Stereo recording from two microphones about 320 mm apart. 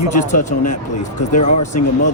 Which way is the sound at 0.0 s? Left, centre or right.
Left.